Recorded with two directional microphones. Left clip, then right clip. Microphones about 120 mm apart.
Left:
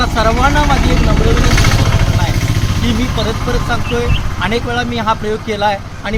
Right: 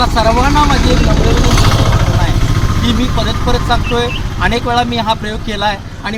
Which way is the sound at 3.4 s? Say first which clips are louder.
Right 3 dB; 5° left (ahead or behind).